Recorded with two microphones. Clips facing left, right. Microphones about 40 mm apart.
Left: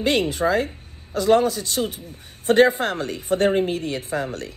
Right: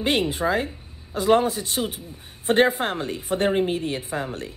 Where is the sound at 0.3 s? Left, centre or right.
Right.